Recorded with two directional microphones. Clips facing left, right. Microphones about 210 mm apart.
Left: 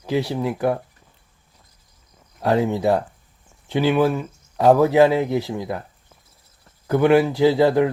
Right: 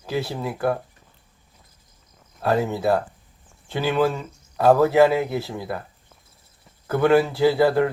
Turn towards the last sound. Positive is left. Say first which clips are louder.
# left 2 dB
turn(degrees=15)  # may be behind; listen again after turning